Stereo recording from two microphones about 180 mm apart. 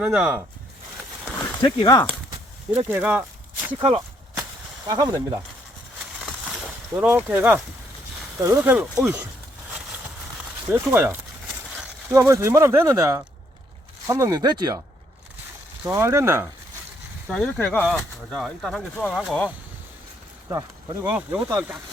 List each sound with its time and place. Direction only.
0.0 s speech: 5° right (ahead or behind)
1.6 s speech: 20° left (ahead or behind)
2.7 s speech: 10° right (ahead or behind)
3.8 s speech: 30° right (ahead or behind)
6.9 s speech: 10° right (ahead or behind)
10.7 s speech: 10° right (ahead or behind)
15.9 s speech: 15° right (ahead or behind)
17.3 s speech: 5° left (ahead or behind)
20.5 s speech: 20° right (ahead or behind)